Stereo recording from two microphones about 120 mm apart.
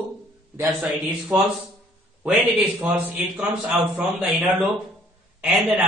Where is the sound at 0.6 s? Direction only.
20° right (ahead or behind).